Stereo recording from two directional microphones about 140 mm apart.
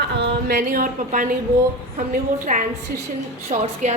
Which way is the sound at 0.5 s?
80° right.